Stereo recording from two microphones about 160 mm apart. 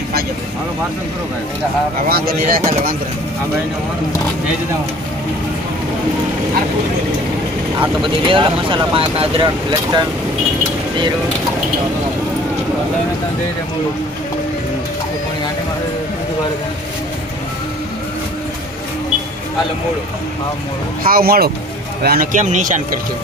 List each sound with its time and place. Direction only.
2.0 s speech: 70° right (ahead or behind)
8.0 s speech: 30° right (ahead or behind)
21.0 s a man's voice: 70° right (ahead or behind); by 22.8 s 50° right (ahead or behind)